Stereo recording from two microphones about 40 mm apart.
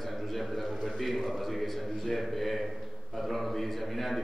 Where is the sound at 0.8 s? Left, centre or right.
Centre.